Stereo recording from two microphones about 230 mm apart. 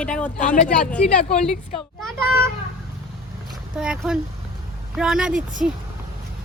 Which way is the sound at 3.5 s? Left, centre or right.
Centre.